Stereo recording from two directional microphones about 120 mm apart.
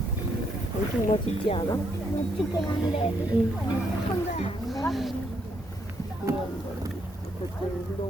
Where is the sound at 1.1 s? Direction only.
55° left (ahead or behind).